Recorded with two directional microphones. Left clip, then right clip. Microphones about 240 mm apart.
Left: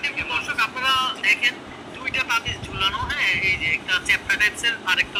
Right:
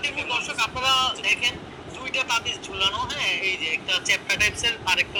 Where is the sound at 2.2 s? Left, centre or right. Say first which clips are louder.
Left 1 dB; centre.